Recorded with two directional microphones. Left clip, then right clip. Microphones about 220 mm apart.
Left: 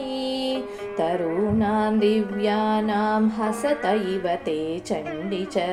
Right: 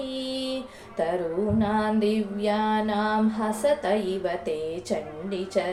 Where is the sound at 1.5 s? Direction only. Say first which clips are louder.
Left 2 dB; 30° left (ahead or behind).